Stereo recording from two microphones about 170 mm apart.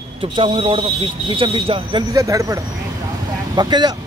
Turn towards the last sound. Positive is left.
turn(degrees=-25)  # may be behind; listen again after turning